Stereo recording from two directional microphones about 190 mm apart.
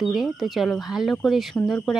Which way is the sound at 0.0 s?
Centre (ahead or behind).